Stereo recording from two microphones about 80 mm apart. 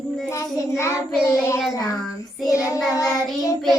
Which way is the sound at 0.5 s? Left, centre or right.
Left.